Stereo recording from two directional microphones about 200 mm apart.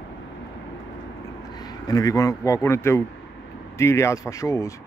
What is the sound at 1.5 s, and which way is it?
Speech, 20° left (ahead or behind).